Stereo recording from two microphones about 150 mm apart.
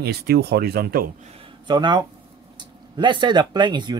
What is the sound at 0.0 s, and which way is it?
Speech, 90° right.